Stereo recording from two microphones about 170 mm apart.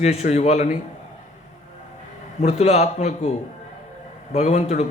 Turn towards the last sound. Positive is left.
turn(degrees=40)  # may be behind; listen again after turning